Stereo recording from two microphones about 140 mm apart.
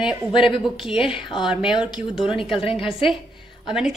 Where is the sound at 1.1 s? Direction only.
35° left (ahead or behind).